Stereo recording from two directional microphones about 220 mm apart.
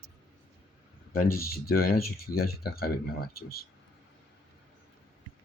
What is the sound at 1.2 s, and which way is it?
Speech, 40° left (ahead or behind).